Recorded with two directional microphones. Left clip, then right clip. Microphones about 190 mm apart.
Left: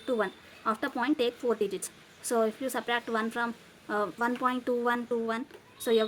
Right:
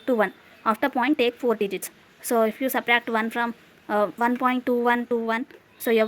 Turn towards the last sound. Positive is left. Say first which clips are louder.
# right 5 dB
turn(degrees=-30)  # may be behind; listen again after turning